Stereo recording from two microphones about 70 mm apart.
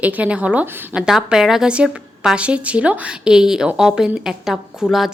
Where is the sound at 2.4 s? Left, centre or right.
Centre.